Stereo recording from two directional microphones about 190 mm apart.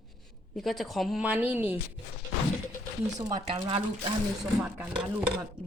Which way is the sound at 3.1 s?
25° right (ahead or behind).